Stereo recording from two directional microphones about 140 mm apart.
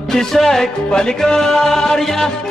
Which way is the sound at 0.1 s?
5° left (ahead or behind).